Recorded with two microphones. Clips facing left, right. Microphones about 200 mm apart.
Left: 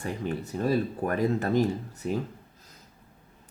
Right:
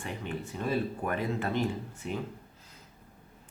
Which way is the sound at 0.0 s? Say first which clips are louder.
Left 5 dB; 40° left (ahead or behind).